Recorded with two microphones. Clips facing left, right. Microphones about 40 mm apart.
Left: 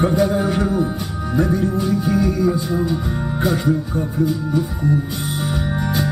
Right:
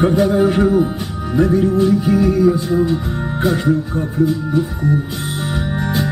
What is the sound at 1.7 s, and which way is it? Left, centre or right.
Speech, centre.